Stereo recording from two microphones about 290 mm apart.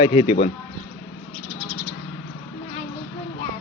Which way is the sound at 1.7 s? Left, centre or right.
Left.